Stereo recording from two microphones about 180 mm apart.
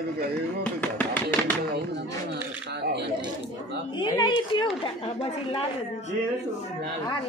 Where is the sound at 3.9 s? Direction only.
25° left (ahead or behind).